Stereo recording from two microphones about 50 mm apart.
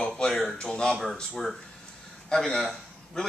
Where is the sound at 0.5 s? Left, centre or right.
Centre.